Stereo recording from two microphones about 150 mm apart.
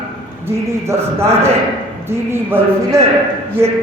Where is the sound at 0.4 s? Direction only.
15° right (ahead or behind).